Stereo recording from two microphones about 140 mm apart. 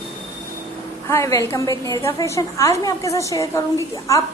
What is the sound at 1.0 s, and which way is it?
A woman's voice, 20° left (ahead or behind).